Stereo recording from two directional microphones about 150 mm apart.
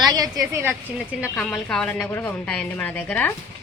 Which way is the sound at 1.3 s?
5° left (ahead or behind).